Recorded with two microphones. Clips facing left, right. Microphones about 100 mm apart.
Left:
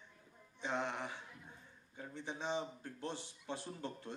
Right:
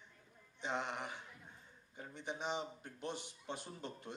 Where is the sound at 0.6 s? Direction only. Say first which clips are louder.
Left 1 dB; 15° right (ahead or behind).